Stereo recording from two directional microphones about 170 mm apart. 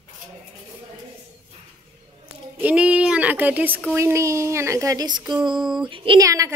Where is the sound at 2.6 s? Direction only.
10° right (ahead or behind).